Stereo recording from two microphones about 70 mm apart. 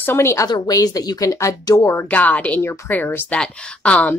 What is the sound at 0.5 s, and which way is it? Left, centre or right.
Speech, left.